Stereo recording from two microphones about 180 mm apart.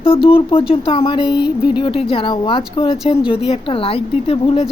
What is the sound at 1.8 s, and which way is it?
Speech, 30° left (ahead or behind).